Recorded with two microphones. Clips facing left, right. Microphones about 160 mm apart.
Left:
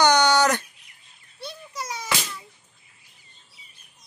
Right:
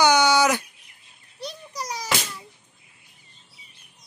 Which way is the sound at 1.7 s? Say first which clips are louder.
Right 1 dB; 40° right (ahead or behind).